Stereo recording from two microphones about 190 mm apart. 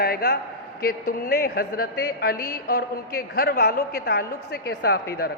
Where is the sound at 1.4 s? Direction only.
55° left (ahead or behind).